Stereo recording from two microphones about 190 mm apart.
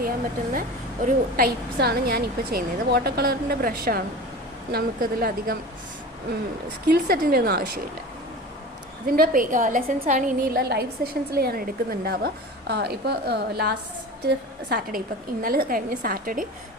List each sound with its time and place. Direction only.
1.0 s a woman's voice: 50° right (ahead or behind)
6.8 s a woman's voice: 50° right (ahead or behind)
9.1 s a woman's voice: 50° right (ahead or behind)